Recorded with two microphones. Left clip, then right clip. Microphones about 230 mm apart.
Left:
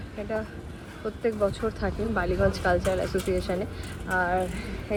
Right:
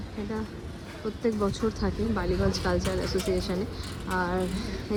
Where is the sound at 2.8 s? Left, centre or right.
Centre.